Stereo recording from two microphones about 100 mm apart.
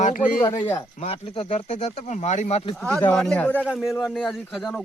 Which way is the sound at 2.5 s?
75° left (ahead or behind).